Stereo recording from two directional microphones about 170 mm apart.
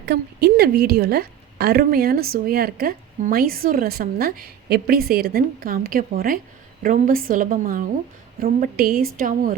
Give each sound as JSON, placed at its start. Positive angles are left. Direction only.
{"t": 0.0, "sound": "a woman's voice", "side_deg": -75}